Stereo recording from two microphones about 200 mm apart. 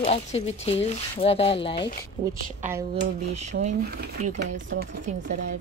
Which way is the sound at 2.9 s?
35° right (ahead or behind).